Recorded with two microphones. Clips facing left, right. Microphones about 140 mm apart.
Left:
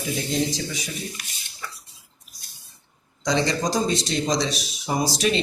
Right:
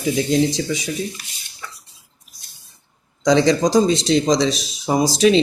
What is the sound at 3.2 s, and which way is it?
Speech, 90° right.